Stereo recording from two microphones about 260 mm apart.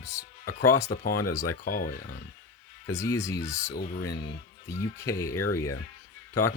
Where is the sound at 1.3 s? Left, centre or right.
Centre.